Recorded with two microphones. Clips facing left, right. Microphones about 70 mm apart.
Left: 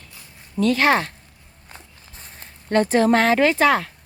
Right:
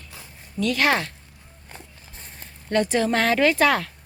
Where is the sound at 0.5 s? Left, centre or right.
Left.